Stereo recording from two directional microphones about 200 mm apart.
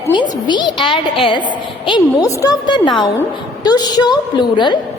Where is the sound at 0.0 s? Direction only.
20° left (ahead or behind).